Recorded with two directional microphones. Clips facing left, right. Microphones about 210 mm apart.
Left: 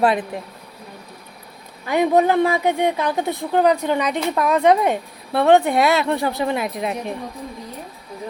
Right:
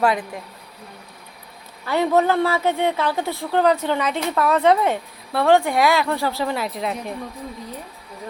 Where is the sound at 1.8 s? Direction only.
15° left (ahead or behind).